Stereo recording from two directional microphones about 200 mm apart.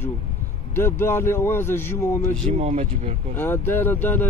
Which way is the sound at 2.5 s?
35° right (ahead or behind).